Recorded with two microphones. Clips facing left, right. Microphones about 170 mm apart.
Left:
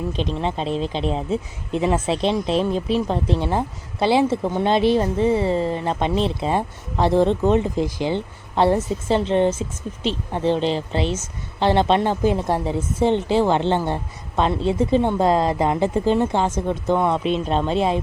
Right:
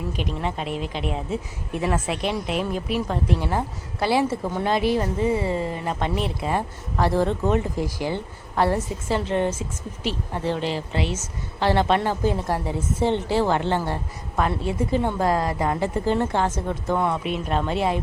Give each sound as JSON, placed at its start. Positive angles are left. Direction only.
{"t": 0.1, "sound": "a woman's voice", "side_deg": 25}